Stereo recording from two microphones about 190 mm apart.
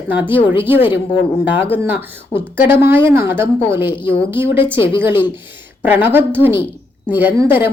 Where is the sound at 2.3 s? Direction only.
25° left (ahead or behind).